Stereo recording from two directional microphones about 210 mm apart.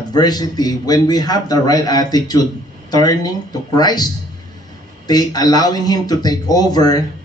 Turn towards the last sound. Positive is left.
turn(degrees=20)  # may be behind; listen again after turning